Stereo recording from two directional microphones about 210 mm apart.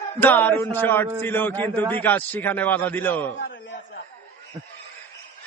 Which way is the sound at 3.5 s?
60° left (ahead or behind).